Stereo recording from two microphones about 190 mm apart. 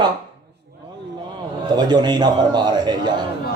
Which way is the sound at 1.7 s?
20° right (ahead or behind).